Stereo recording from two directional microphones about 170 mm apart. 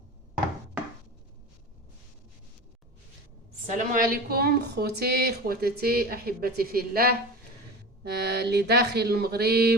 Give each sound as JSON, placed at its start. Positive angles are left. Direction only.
{"t": 3.7, "sound": "a woman's voice", "side_deg": -50}
{"t": 8.0, "sound": "speech", "side_deg": -75}